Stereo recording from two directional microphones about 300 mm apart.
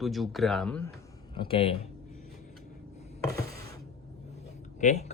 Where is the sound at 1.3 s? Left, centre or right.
Centre.